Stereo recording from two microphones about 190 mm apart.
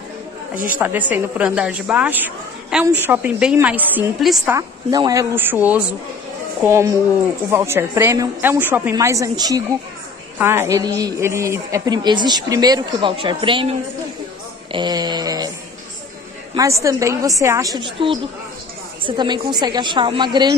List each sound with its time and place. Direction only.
0.7 s a woman's voice: 10° right (ahead or behind)
4.6 s a woman's voice: 20° right (ahead or behind)
14.7 s a sound: 25° right (ahead or behind)
16.5 s a woman's voice: 15° right (ahead or behind)